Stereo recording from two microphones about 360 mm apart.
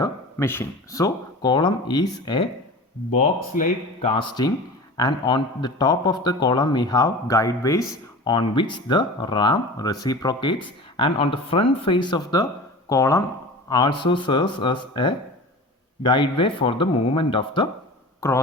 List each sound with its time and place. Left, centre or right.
0.0 s a man's voice: centre